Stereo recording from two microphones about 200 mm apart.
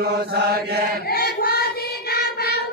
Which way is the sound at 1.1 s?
50° left (ahead or behind).